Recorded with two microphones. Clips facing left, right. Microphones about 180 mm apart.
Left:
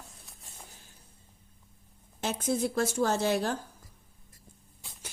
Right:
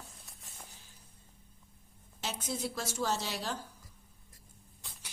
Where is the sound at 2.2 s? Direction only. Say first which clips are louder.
Left 8 dB; 50° left (ahead or behind).